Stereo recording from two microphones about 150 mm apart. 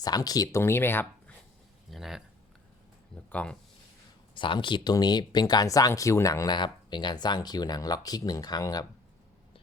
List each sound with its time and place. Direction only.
0.0 s speech: 25° left (ahead or behind)
1.9 s speech: centre (ahead or behind)
3.2 s speech: 10° left (ahead or behind)
4.4 s speech: 35° left (ahead or behind)